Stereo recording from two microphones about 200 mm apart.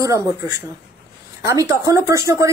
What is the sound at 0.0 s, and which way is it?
Speech, 15° right (ahead or behind).